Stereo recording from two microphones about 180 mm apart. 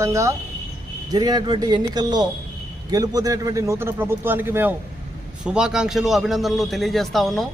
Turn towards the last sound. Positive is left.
turn(degrees=0)  # may be behind; listen again after turning